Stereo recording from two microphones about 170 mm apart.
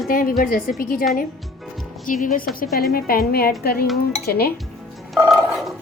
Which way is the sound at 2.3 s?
55° left (ahead or behind).